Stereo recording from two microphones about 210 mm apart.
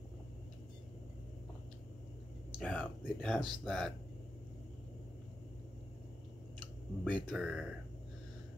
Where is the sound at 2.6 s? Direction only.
5° left (ahead or behind).